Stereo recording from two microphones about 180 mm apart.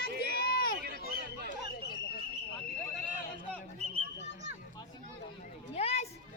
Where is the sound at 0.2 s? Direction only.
60° left (ahead or behind).